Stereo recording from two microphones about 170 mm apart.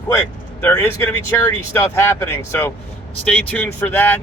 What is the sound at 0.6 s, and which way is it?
Speech, 10° left (ahead or behind).